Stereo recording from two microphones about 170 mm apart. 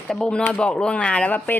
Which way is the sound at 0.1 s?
5° left (ahead or behind).